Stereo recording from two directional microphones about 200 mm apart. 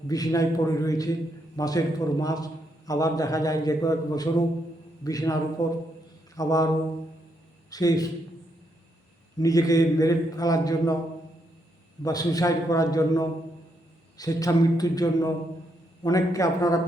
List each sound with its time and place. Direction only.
0.1 s a man's voice: 15° left (ahead or behind)
7.7 s speech: 20° left (ahead or behind)
9.4 s a man's voice: 15° left (ahead or behind)
12.0 s a man's voice: 20° left (ahead or behind)